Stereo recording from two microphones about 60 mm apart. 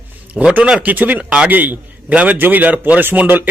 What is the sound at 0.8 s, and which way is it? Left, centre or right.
Speech, right.